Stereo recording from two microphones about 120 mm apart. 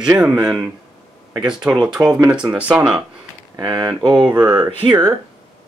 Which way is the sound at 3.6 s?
35° right (ahead or behind).